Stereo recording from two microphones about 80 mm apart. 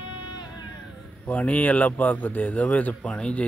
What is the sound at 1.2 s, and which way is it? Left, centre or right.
A man's voice, centre.